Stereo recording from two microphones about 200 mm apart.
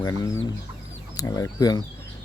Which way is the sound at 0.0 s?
15° left (ahead or behind).